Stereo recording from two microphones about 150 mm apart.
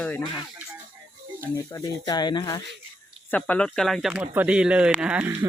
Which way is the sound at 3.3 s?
10° left (ahead or behind).